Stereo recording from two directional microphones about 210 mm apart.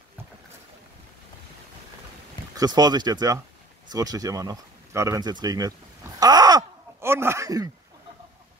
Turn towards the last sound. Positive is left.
turn(degrees=-15)  # may be behind; listen again after turning